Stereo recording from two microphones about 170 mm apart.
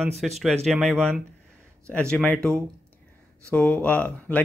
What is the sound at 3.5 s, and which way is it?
Speech, 5° left (ahead or behind).